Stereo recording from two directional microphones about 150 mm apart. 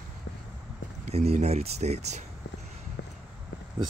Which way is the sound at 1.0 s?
45° right (ahead or behind).